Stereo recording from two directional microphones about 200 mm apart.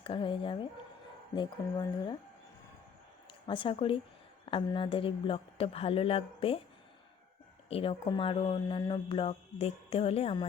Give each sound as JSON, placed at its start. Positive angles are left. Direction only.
{"t": 0.0, "sound": "speech", "side_deg": 25}
{"t": 3.4, "sound": "speech", "side_deg": 25}
{"t": 7.7, "sound": "speech", "side_deg": 30}